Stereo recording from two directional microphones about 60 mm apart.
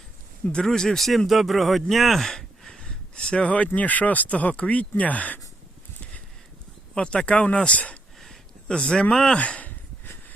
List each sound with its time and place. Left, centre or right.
0.5 s speech: centre; by 5.4 s left
6.9 s speech: centre
9.4 s speech: left